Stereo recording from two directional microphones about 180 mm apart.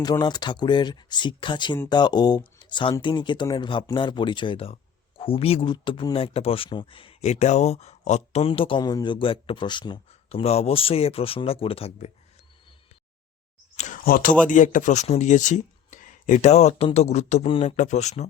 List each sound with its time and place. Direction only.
0.0 s speech: 25° left (ahead or behind)
13.7 s a sound: 45° left (ahead or behind)
14.4 s speech: 45° left (ahead or behind); by 17.7 s 30° left (ahead or behind)
17.7 s speech: 40° left (ahead or behind)